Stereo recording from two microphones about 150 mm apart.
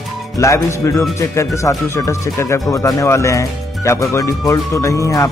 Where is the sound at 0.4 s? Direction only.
20° left (ahead or behind).